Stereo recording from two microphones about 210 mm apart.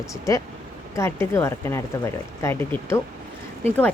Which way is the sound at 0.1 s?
15° left (ahead or behind).